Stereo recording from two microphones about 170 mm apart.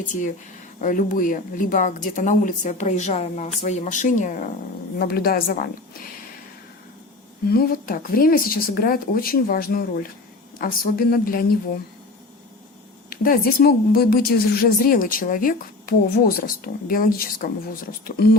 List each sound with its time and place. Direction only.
0.1 s speech: 50° left (ahead or behind)
4.9 s a woman's voice: 65° left (ahead or behind)
7.4 s a woman's voice: 60° left (ahead or behind)
13.1 s a woman's voice: 55° left (ahead or behind)